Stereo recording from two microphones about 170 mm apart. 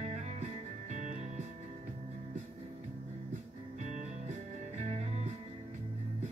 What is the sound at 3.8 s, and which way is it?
Music, 45° right (ahead or behind).